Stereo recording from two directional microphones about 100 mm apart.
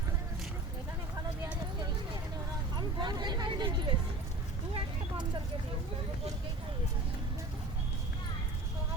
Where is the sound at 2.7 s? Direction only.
45° right (ahead or behind).